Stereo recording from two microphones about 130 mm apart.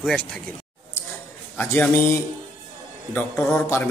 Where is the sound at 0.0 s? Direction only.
10° left (ahead or behind).